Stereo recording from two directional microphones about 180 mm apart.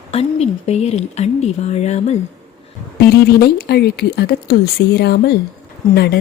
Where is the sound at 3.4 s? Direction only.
60° left (ahead or behind).